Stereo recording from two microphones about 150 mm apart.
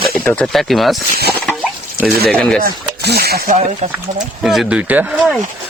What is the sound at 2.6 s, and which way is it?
Speech, 90° right.